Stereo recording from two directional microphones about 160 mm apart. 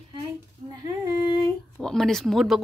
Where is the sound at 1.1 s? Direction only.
35° right (ahead or behind).